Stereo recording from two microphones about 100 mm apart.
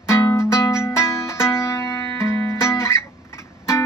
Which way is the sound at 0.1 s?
25° left (ahead or behind).